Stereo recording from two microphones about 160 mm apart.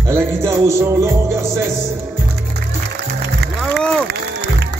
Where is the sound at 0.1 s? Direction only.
20° right (ahead or behind).